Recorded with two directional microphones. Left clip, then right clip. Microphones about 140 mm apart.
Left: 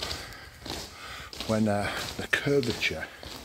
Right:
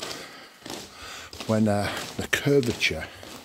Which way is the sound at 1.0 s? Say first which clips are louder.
Right 3 dB; 45° right (ahead or behind).